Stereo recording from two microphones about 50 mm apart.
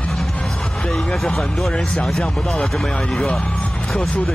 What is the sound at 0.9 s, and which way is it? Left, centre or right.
Speech, centre.